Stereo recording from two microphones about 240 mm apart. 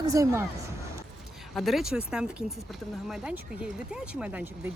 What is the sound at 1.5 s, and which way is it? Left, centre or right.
Speech, centre.